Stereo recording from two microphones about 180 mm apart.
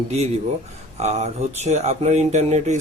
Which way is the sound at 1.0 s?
40° right (ahead or behind).